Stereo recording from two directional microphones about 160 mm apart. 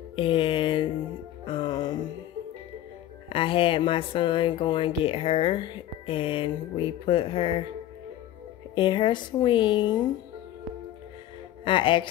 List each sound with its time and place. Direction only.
0.1 s mantra: 35° left (ahead or behind)
1.4 s music: 30° left (ahead or behind)
3.3 s speech: 35° left (ahead or behind)
8.7 s speech: 30° left (ahead or behind)
11.6 s speech: 30° left (ahead or behind)